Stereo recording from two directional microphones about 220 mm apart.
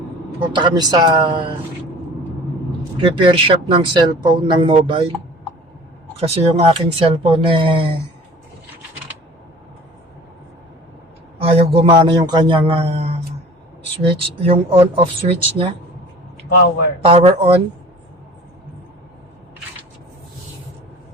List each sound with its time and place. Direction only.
0.5 s speech: 20° right (ahead or behind)
3.0 s speech: 25° right (ahead or behind)
6.1 s speech: 30° right (ahead or behind)
11.5 s speech: 25° right (ahead or behind)
17.1 s speech: 25° right (ahead or behind)